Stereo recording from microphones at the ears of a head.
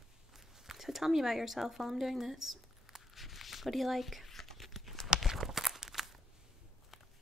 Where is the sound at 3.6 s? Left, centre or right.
Centre.